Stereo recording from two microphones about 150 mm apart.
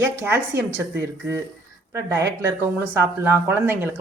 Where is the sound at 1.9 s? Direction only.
20° right (ahead or behind).